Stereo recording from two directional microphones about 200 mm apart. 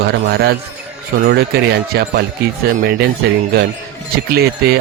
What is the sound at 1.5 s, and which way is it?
Speech, 50° right (ahead or behind).